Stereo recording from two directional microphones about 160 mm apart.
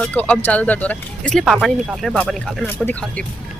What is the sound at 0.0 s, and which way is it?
Speech, 10° left (ahead or behind).